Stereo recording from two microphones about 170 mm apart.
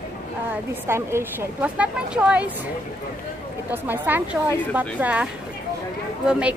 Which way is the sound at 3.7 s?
10° right (ahead or behind).